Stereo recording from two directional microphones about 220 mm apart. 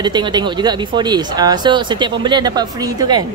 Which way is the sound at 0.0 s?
20° right (ahead or behind).